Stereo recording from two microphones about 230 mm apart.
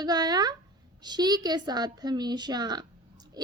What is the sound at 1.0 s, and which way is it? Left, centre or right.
A woman's voice, centre.